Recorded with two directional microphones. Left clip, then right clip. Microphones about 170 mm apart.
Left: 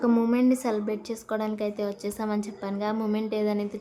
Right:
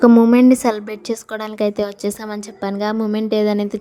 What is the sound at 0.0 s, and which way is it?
A woman's voice, 45° right (ahead or behind).